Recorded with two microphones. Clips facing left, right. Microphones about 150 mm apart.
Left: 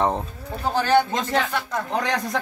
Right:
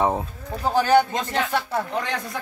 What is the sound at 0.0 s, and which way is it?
Speech, 10° right (ahead or behind).